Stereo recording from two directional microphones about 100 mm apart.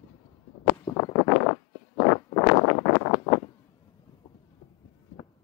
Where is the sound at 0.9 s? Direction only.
40° left (ahead or behind).